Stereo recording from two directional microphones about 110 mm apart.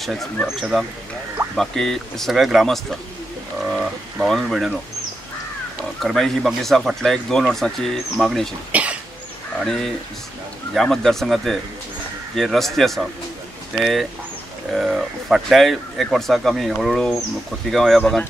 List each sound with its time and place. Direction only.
0.0 s speech: centre (ahead or behind)
5.9 s speech: centre (ahead or behind)
8.7 s cough: 10° right (ahead or behind)
10.7 s speech: centre (ahead or behind)